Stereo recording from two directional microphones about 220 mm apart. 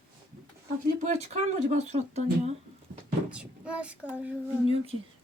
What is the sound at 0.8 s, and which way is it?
Speech, 30° right (ahead or behind).